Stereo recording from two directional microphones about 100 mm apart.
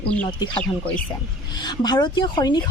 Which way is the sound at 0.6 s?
15° left (ahead or behind).